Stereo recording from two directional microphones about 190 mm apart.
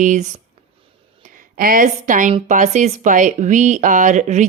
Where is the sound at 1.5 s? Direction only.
45° right (ahead or behind).